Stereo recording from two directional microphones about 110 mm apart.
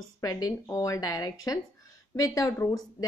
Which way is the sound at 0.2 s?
35° left (ahead or behind).